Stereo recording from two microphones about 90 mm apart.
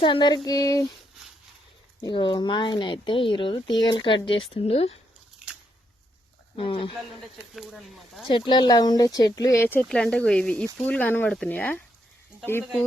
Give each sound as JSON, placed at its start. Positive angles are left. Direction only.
{"t": 0.0, "sound": "speech", "side_deg": 60}
{"t": 2.0, "sound": "speech", "side_deg": 55}
{"t": 5.4, "sound": "a sound", "side_deg": -10}
{"t": 6.6, "sound": "speech", "side_deg": 75}
{"t": 7.5, "sound": "speech", "side_deg": 0}
{"t": 8.3, "sound": "speech", "side_deg": 65}
{"t": 9.9, "sound": "speech", "side_deg": 10}